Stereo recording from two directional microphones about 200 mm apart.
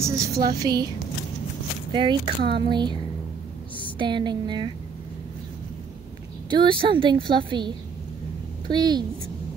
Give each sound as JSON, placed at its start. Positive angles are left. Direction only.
{"t": 0.0, "sound": "a woman's voice", "side_deg": -15}
{"t": 0.3, "sound": "a woman's voice", "side_deg": -50}
{"t": 0.6, "sound": "a woman's voice", "side_deg": -20}
{"t": 4.0, "sound": "a woman's voice", "side_deg": -20}
{"t": 6.5, "sound": "a woman's voice", "side_deg": -25}